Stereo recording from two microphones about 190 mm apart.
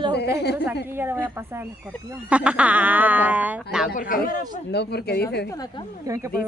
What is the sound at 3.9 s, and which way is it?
Speech, 50° left (ahead or behind).